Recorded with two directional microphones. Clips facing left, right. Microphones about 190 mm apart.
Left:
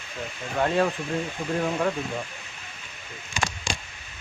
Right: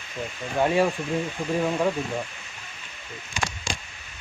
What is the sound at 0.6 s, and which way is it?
Speech, 10° right (ahead or behind).